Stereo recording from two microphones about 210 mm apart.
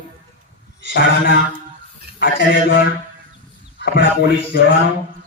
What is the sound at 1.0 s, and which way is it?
A man's voice, 60° left (ahead or behind).